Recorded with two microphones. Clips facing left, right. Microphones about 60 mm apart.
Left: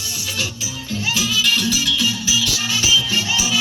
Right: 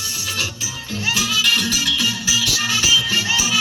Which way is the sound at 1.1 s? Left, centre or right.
Right.